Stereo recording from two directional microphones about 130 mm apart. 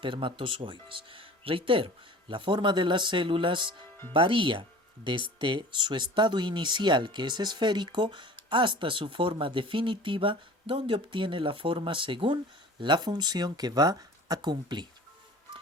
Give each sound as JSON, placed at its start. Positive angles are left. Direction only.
{"t": 0.0, "sound": "speech", "side_deg": -40}